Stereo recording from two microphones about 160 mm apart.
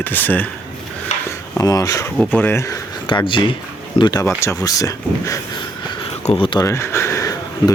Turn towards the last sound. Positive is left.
turn(degrees=20)  # may be behind; listen again after turning